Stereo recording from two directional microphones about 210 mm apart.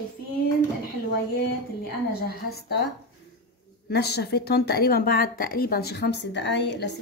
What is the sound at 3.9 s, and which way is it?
A woman's voice, 50° left (ahead or behind).